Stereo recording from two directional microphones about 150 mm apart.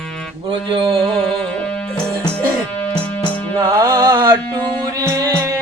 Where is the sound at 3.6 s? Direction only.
25° right (ahead or behind).